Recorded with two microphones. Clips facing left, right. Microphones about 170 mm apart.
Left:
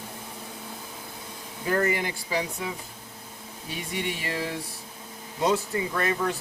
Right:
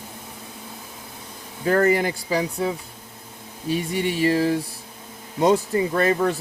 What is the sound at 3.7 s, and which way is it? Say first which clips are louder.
Speech: right 9 dB; 35° right (ahead or behind).